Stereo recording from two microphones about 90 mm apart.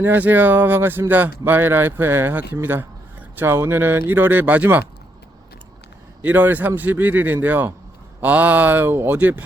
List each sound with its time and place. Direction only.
0.0 s speech: 20° right (ahead or behind)
6.2 s speech: 20° right (ahead or behind)